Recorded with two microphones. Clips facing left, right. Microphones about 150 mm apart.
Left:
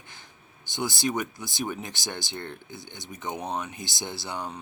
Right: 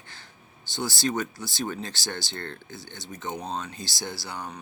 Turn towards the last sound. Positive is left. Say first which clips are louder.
# left 2 dB
turn(degrees=20)  # may be behind; listen again after turning